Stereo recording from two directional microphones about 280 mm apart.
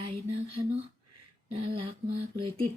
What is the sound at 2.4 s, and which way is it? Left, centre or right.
Speech, centre.